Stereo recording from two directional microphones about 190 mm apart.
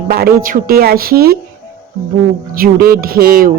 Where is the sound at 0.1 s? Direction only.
50° right (ahead or behind).